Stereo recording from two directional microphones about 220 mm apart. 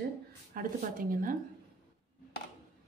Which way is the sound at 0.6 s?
40° right (ahead or behind).